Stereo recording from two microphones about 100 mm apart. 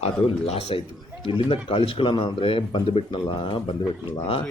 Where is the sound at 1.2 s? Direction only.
60° left (ahead or behind).